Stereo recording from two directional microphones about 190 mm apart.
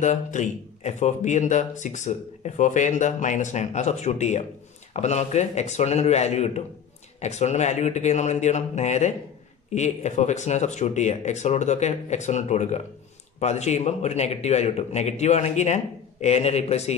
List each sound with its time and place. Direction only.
0.0 s speech: 40° left (ahead or behind)